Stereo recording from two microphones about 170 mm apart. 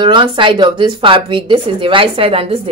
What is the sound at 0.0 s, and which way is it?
A woman's voice, 30° right (ahead or behind).